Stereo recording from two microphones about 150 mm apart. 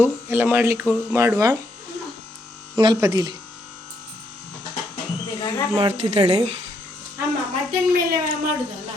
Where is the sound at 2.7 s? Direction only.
30° right (ahead or behind).